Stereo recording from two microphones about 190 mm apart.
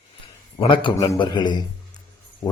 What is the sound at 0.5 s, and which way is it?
A man's voice, 25° left (ahead or behind).